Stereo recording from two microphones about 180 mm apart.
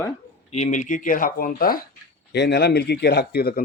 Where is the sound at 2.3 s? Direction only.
65° left (ahead or behind).